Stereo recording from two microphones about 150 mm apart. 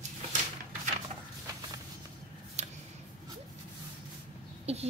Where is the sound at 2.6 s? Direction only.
50° right (ahead or behind).